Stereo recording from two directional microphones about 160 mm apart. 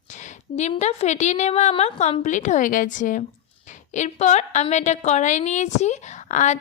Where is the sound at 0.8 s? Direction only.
45° left (ahead or behind).